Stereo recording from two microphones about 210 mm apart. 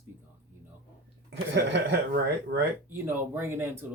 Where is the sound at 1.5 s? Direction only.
55° right (ahead or behind).